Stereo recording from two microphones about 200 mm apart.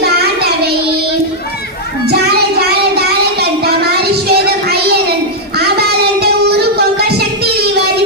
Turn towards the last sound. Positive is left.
turn(degrees=-55)  # may be behind; listen again after turning